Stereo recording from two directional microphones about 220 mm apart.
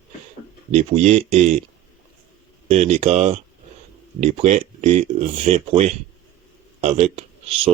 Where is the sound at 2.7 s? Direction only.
30° right (ahead or behind).